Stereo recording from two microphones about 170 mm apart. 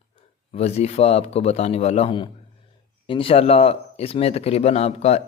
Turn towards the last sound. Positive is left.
turn(degrees=40)  # may be behind; listen again after turning